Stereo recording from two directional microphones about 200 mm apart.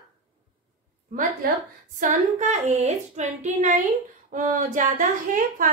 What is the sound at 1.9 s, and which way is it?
A woman's voice, 35° right (ahead or behind).